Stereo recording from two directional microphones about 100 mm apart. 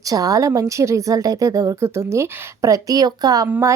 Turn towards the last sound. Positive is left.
turn(degrees=-25)  # may be behind; listen again after turning